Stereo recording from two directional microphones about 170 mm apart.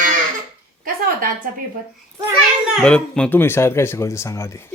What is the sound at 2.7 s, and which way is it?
Speech, 5° left (ahead or behind).